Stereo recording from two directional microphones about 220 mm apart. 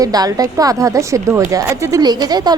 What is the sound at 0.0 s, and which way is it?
A woman's voice, 15° right (ahead or behind).